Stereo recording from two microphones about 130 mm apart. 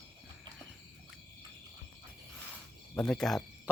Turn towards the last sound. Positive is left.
turn(degrees=5)  # may be behind; listen again after turning